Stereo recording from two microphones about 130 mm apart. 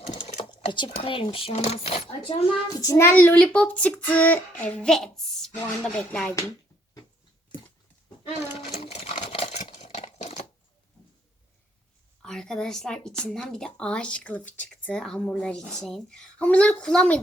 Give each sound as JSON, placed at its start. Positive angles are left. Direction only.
{"t": 0.7, "sound": "speech", "side_deg": 40}
{"t": 1.5, "sound": "speech", "side_deg": 55}
{"t": 2.8, "sound": "speech", "side_deg": 20}
{"t": 8.7, "sound": "sewing machine", "side_deg": 50}
{"t": 9.6, "sound": "a sound", "side_deg": 55}
{"t": 12.2, "sound": "speech", "side_deg": 5}